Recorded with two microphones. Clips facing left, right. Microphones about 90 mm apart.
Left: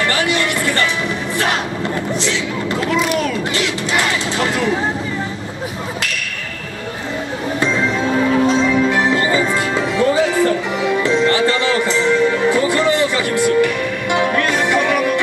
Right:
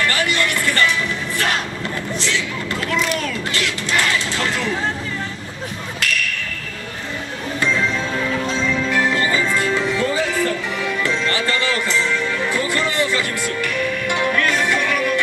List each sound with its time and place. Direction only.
0.0 s music: 20° left (ahead or behind)
2.1 s speech: 20° left (ahead or behind)
3.5 s music: 15° left (ahead or behind)
7.6 s music: 25° left (ahead or behind)